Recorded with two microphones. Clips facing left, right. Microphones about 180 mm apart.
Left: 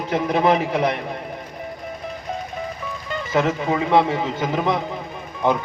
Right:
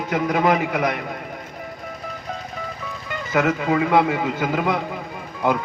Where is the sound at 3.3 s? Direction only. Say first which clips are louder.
Right 1 dB; 30° left (ahead or behind).